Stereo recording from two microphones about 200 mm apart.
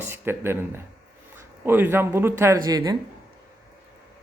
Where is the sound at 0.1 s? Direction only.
10° right (ahead or behind).